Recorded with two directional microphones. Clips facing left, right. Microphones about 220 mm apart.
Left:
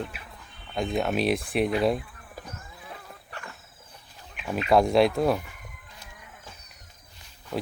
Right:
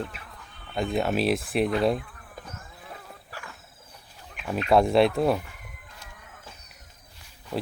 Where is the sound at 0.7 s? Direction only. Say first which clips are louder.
Right 1 dB; centre (ahead or behind).